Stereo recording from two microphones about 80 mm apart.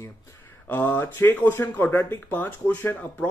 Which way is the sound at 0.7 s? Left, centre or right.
Left.